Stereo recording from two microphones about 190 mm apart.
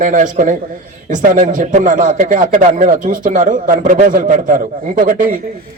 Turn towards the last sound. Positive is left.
turn(degrees=-45)  # may be behind; listen again after turning